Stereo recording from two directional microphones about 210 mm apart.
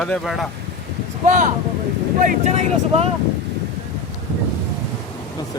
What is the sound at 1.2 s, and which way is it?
Speech, 35° right (ahead or behind).